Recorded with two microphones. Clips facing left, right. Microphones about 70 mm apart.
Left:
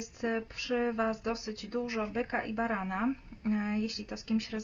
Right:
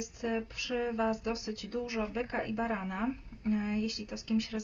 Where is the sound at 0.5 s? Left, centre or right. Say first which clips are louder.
Left 2 dB; left.